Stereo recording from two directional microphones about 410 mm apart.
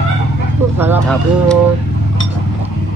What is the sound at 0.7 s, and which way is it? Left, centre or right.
Speech, centre.